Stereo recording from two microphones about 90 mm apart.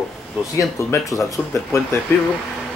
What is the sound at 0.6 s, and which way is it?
Speech, 30° left (ahead or behind).